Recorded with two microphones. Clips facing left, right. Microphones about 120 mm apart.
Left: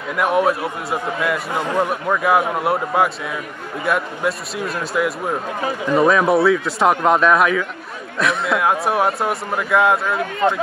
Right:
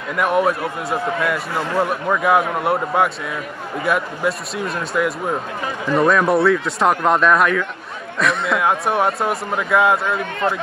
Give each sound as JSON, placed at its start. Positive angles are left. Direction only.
{"t": 0.1, "sound": "a man's voice", "side_deg": 0}
{"t": 10.4, "sound": "speech", "side_deg": 10}